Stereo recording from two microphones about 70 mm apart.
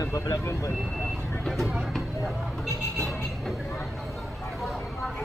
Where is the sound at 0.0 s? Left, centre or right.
Left.